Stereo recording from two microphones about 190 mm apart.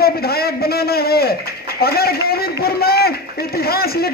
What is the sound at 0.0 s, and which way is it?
A man's voice, 55° left (ahead or behind).